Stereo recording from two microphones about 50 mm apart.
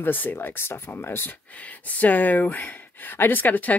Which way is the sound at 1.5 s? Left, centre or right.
Left.